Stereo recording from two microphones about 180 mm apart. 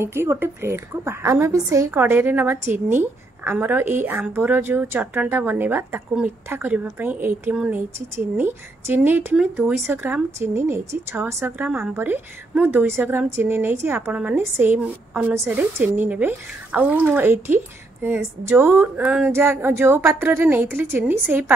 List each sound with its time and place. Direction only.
0.0 s a woman's voice: 15° right (ahead or behind)